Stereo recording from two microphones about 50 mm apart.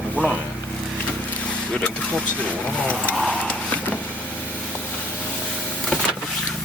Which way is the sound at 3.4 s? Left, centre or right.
Left.